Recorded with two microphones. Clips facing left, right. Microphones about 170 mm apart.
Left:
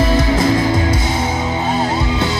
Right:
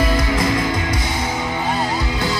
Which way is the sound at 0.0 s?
25° left (ahead or behind).